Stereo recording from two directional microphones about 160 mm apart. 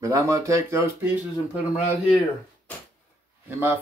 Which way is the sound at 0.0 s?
20° right (ahead or behind).